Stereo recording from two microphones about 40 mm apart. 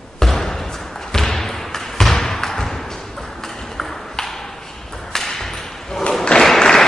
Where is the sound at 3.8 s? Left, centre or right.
Centre.